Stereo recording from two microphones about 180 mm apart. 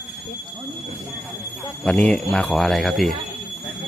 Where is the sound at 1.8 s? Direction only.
5° left (ahead or behind).